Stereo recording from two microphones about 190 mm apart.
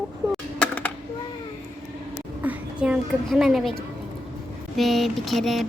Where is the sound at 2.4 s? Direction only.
5° right (ahead or behind).